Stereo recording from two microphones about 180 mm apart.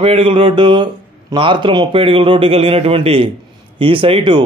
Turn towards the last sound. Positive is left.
turn(degrees=-25)  # may be behind; listen again after turning